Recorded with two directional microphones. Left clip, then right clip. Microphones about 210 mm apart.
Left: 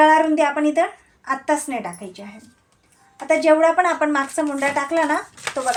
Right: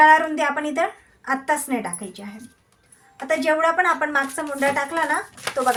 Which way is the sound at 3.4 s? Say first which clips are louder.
Left 3 dB; 30° left (ahead or behind).